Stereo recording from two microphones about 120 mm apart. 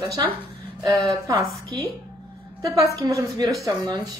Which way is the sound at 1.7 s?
35° right (ahead or behind).